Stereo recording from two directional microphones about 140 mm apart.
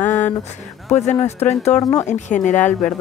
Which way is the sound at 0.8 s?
55° left (ahead or behind).